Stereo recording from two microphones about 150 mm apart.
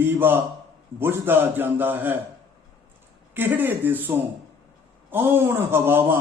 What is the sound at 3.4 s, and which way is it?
A man's voice, 15° right (ahead or behind).